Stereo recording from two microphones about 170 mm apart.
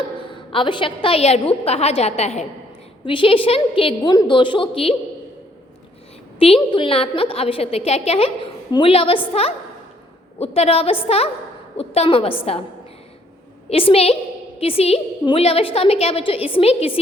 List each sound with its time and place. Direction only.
0.3 s a woman's voice: 30° left (ahead or behind)
6.4 s a woman's voice: 35° left (ahead or behind)
13.7 s a woman's voice: 35° left (ahead or behind)